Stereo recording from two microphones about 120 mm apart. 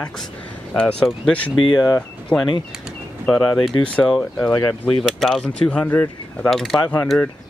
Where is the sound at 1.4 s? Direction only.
40° left (ahead or behind).